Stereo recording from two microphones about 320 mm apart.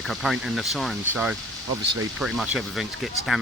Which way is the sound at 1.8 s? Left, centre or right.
Right.